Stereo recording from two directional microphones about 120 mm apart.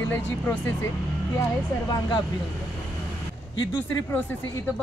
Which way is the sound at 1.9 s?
35° left (ahead or behind).